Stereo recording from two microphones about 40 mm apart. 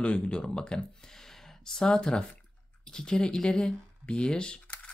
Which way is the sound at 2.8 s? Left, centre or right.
Left.